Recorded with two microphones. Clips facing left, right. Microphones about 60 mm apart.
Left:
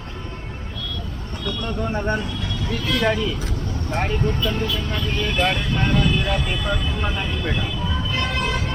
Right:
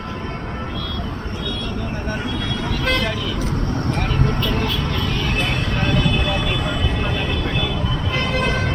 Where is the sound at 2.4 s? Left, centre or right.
Right.